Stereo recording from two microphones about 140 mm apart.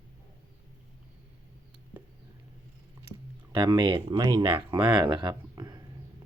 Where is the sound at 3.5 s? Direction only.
30° right (ahead or behind).